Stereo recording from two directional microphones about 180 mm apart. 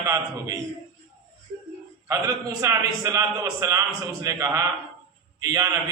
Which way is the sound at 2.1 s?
20° right (ahead or behind).